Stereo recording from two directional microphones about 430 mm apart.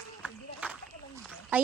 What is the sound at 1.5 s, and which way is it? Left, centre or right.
Speech, centre.